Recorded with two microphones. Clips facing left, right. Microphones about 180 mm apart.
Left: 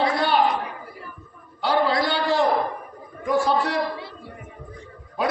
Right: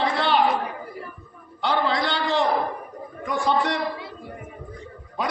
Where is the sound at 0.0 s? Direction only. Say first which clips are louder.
Left 1 dB; 10° left (ahead or behind).